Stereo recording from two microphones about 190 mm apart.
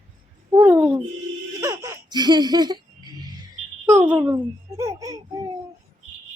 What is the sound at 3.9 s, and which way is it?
A child's voice, 10° right (ahead or behind).